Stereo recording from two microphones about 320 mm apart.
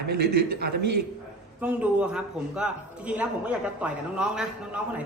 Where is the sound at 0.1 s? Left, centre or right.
Right.